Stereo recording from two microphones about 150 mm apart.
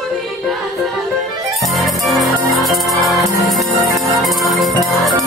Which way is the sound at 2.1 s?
Centre (ahead or behind).